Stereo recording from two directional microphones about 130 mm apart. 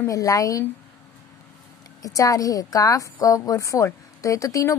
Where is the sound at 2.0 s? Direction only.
25° left (ahead or behind).